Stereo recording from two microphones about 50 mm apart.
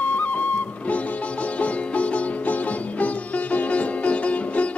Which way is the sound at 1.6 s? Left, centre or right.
Left.